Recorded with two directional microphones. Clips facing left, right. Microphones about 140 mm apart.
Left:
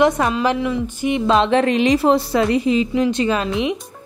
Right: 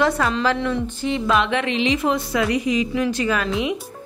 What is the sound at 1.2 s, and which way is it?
A woman's voice, 30° left (ahead or behind).